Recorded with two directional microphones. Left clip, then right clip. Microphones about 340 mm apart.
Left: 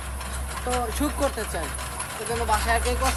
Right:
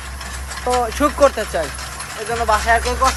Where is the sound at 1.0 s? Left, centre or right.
Right.